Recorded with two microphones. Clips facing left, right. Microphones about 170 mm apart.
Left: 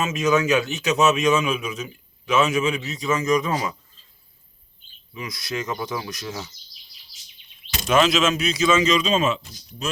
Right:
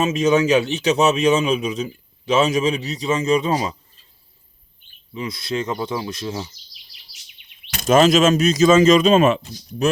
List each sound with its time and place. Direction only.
0.0 s a man's voice: 30° right (ahead or behind)
5.1 s speech: 30° right (ahead or behind)
7.8 s speech: 45° right (ahead or behind); by 9.9 s 60° right (ahead or behind)